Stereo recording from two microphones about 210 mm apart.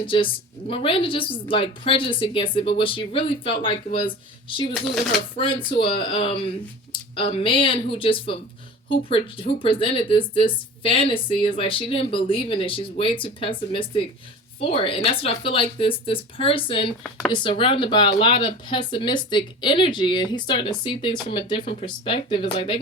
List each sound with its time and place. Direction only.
0.0 s speech: 25° left (ahead or behind)
5.4 s speech: 25° left (ahead or behind)